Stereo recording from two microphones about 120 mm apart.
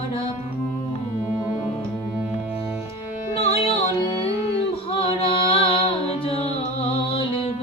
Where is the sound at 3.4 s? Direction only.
55° left (ahead or behind).